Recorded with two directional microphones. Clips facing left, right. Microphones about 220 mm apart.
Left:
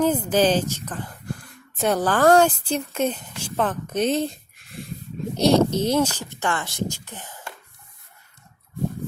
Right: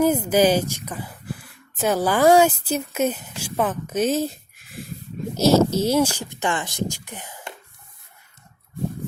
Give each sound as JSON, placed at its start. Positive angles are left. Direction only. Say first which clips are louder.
{"t": 0.0, "sound": "a woman's voice", "louder": "right 2 dB", "side_deg": -10}